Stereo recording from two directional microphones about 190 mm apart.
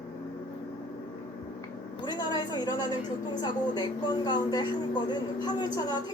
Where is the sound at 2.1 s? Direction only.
20° left (ahead or behind).